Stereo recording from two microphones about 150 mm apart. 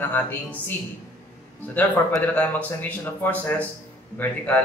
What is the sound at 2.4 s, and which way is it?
Speech, 10° left (ahead or behind).